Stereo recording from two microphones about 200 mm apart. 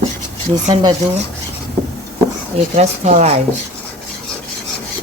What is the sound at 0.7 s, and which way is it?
Speech, 20° right (ahead or behind).